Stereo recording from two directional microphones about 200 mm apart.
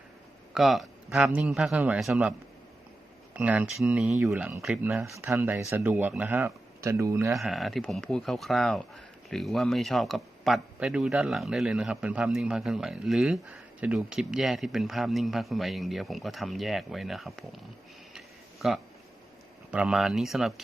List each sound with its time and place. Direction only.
0.5 s a man's voice: centre (ahead or behind)
3.3 s speech: 5° right (ahead or behind)
7.3 s a man's voice: centre (ahead or behind)
19.7 s a man's voice: 5° right (ahead or behind)